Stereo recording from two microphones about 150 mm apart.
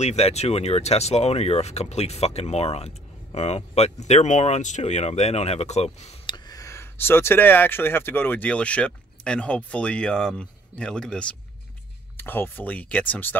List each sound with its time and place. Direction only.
0.0 s speech: 45° left (ahead or behind)
6.2 s speech: 30° left (ahead or behind); by 13.4 s 10° left (ahead or behind)